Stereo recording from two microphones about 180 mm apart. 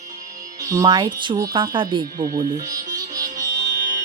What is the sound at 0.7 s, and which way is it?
Speech, 20° right (ahead or behind).